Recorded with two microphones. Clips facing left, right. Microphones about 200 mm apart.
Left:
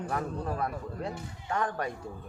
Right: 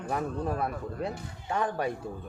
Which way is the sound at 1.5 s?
10° right (ahead or behind).